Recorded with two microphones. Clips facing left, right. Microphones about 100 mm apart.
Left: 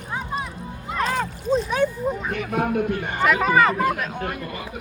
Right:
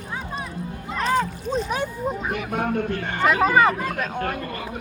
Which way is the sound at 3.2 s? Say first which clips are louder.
Right 1 dB; 30° right (ahead or behind).